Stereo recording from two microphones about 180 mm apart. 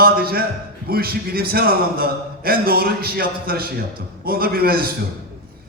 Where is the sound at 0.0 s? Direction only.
60° right (ahead or behind).